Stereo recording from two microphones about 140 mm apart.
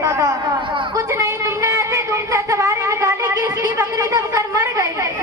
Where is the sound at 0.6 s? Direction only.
35° right (ahead or behind).